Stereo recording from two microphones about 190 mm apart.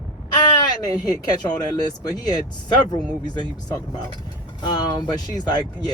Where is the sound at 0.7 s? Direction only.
20° left (ahead or behind).